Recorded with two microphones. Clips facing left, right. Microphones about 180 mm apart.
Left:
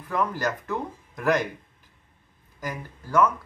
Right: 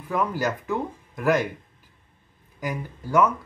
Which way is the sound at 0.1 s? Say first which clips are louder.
Right 1 dB; 5° right (ahead or behind).